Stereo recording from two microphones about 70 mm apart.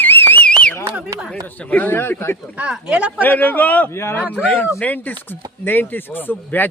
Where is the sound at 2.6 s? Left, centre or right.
Centre.